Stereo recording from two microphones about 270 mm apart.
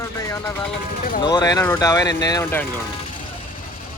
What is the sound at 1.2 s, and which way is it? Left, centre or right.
Speech, centre.